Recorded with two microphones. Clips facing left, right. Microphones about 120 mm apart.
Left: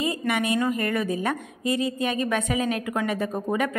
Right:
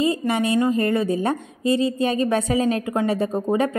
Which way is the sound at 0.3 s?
30° right (ahead or behind).